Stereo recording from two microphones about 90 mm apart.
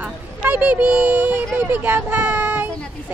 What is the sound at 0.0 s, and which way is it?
Speech, 15° right (ahead or behind).